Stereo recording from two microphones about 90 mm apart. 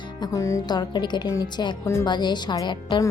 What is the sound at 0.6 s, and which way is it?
Speech, 50° left (ahead or behind).